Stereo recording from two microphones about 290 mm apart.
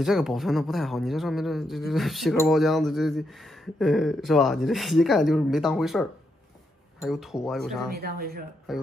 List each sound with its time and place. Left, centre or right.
0.0 s speech: centre
7.9 s speech: right
8.7 s speech: centre